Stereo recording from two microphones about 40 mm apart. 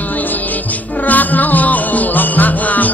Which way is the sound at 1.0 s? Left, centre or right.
Left.